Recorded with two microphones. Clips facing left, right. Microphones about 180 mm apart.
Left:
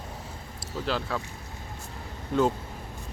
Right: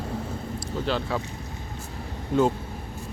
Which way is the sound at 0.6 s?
Centre (ahead or behind).